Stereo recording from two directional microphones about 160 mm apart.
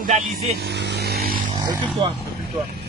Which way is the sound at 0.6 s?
90° right.